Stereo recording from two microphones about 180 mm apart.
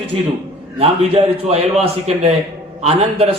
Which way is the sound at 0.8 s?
35° right (ahead or behind).